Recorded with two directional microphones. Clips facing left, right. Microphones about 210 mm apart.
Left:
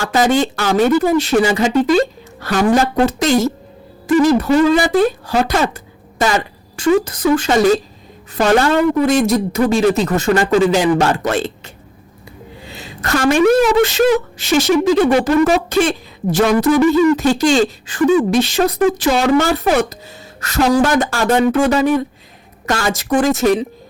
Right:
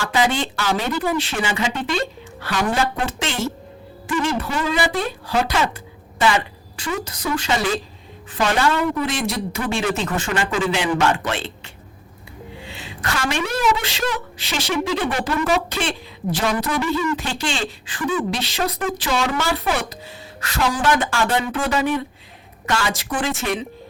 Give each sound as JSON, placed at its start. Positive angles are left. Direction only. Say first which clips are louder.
{"t": 0.0, "sound": "a woman's voice", "louder": "left 6 dB", "side_deg": 45}